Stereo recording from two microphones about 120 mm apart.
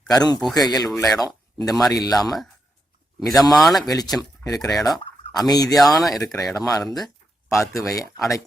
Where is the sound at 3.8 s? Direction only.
30° left (ahead or behind).